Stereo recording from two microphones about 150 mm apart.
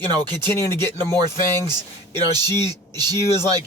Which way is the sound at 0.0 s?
30° right (ahead or behind).